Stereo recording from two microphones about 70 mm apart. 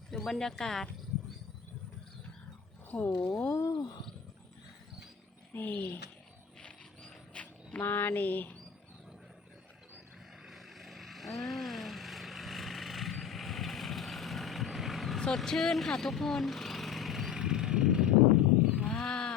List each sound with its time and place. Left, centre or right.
0.2 s speech: centre
2.9 s speech: left
3.7 s speech: left
5.5 s speech: left
6.6 s a sound: centre
10.5 s vehicle: centre
18.9 s wild animals: centre